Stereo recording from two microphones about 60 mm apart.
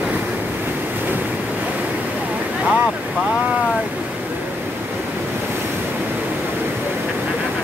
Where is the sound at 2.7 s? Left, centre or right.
Centre.